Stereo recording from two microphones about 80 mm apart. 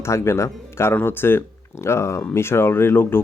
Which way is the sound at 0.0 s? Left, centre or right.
Left.